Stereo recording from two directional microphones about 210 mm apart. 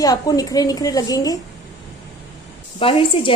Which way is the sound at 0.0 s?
15° left (ahead or behind).